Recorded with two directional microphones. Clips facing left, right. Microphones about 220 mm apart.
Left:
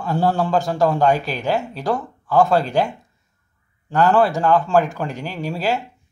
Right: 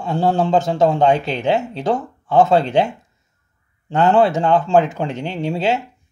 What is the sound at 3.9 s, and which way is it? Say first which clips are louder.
Speech: right 2 dB; 25° right (ahead or behind).